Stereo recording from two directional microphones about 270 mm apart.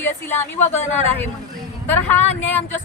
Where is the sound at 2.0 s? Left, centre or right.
Centre.